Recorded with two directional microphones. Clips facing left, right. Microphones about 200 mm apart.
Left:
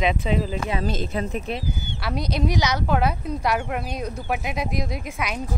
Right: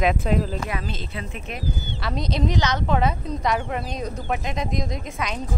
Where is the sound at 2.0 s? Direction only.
5° left (ahead or behind).